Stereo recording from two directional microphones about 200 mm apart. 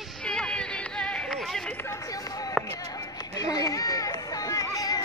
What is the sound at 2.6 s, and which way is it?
Music, 20° left (ahead or behind).